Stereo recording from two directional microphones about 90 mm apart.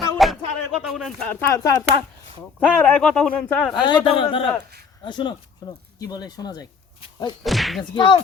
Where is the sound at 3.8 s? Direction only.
60° left (ahead or behind).